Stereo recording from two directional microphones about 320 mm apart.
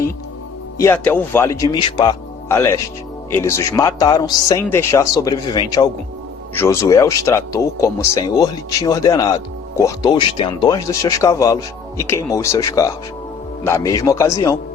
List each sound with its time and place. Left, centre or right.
0.8 s speech: centre